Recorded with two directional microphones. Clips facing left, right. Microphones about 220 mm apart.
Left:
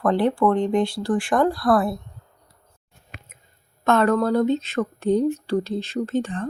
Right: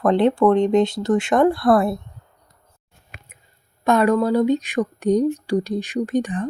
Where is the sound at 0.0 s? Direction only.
20° right (ahead or behind).